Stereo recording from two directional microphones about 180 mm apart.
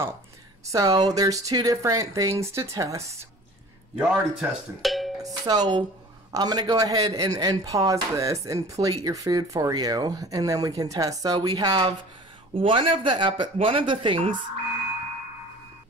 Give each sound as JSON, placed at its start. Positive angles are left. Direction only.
{"t": 0.7, "sound": "speech", "side_deg": -20}
{"t": 3.9, "sound": "speech", "side_deg": -5}
{"t": 5.2, "sound": "speech", "side_deg": -20}